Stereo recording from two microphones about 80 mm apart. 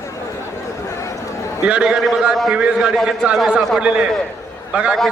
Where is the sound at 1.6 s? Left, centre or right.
Centre.